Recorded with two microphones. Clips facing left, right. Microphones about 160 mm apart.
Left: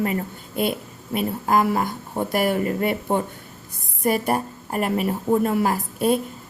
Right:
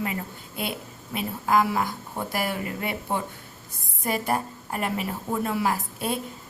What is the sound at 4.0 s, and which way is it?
A woman's voice, 60° left (ahead or behind).